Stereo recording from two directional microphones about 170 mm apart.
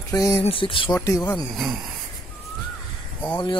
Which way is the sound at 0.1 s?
20° left (ahead or behind).